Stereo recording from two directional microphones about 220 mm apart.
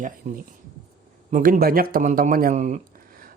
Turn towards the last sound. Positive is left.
turn(degrees=-35)  # may be behind; listen again after turning